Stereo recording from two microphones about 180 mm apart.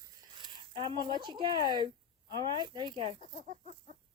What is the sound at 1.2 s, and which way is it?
Speech, 25° right (ahead or behind).